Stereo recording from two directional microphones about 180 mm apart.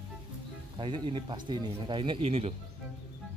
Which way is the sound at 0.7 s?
30° right (ahead or behind).